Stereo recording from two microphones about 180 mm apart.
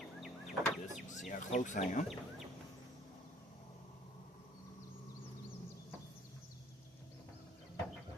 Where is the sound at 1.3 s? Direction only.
45° left (ahead or behind).